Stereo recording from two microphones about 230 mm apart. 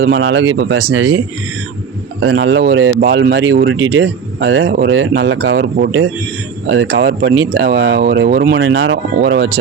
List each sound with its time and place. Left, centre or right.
0.0 s speech: right
2.2 s speech: right